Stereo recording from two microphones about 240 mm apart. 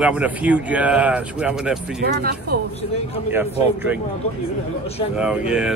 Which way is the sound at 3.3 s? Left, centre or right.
Centre.